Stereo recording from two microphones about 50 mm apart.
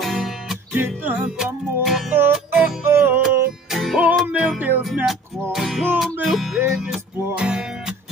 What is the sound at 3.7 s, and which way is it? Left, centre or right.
Music, centre.